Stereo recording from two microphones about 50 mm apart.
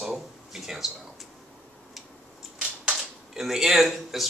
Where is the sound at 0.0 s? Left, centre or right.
Centre.